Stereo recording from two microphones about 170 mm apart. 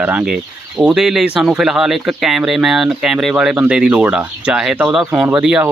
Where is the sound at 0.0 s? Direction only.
10° right (ahead or behind).